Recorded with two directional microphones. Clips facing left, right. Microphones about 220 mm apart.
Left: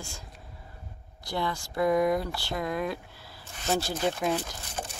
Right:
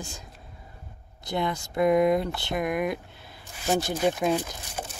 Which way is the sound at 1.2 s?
20° right (ahead or behind).